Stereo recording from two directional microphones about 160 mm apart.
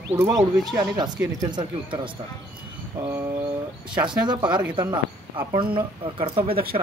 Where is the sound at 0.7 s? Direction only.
25° right (ahead or behind).